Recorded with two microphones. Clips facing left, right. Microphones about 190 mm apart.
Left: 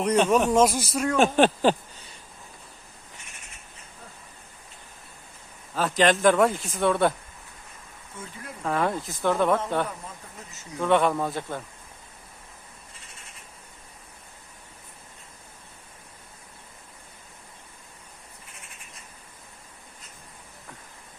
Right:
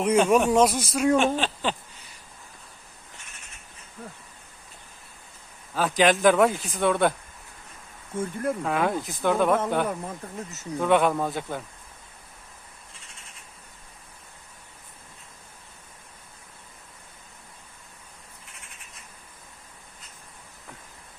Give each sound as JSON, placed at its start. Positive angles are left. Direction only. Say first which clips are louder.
{"t": 0.0, "sound": "speech", "louder": "right 1 dB", "side_deg": -5}
{"t": 1.2, "sound": "speech", "louder": "left 6 dB", "side_deg": 50}
{"t": 5.7, "sound": "speech", "louder": "right 1 dB", "side_deg": 0}
{"t": 8.2, "sound": "speech", "louder": "right 14 dB", "side_deg": -50}
{"t": 8.6, "sound": "speech", "louder": "left 4 dB", "side_deg": 0}
{"t": 10.8, "sound": "speech", "louder": "right 1 dB", "side_deg": -5}